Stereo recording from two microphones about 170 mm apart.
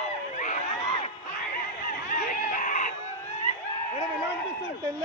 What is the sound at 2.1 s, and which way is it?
Screaming, 50° left (ahead or behind).